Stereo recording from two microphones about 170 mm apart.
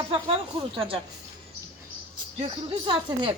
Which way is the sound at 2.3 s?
30° right (ahead or behind).